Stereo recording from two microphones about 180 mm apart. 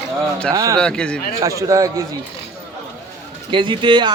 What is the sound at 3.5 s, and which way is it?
Speech, 25° right (ahead or behind).